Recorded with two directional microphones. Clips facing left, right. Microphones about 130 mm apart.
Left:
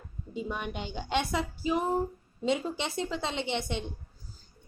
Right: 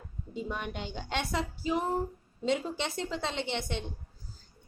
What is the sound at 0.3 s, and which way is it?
A woman's voice, 15° left (ahead or behind).